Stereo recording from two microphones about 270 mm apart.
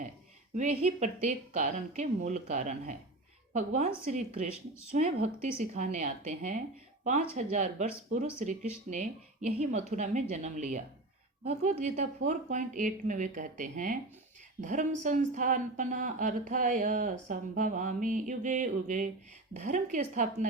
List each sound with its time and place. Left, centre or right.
0.5 s speech: right